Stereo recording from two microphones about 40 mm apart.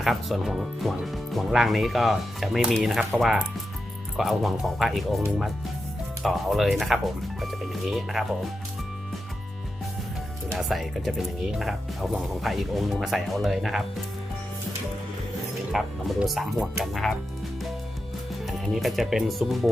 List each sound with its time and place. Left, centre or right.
0.0 s speech: centre
4.2 s speech: centre
6.2 s speech: centre
10.6 s speech: centre
15.7 s speech: centre
18.7 s speech: centre